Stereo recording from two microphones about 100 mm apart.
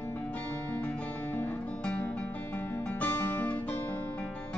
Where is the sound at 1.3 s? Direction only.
15° left (ahead or behind).